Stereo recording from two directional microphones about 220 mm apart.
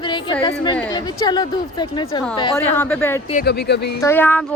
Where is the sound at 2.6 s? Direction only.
10° left (ahead or behind).